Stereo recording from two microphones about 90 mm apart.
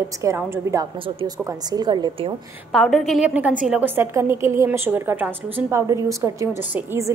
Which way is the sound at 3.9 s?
30° right (ahead or behind).